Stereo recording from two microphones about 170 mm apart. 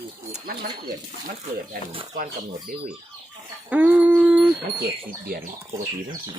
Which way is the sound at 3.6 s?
10° right (ahead or behind).